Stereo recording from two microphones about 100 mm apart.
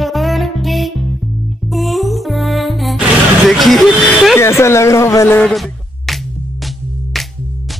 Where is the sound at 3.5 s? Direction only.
Centre (ahead or behind).